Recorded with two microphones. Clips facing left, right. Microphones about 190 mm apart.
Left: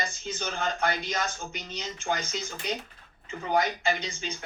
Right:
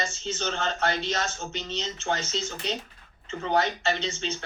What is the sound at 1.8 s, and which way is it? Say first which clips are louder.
Speech: even; 10° left (ahead or behind).